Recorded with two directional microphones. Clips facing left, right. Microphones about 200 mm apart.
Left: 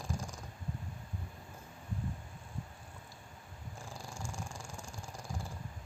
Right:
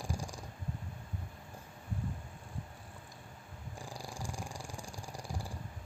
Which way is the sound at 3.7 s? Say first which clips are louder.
Right 3 dB; 15° right (ahead or behind).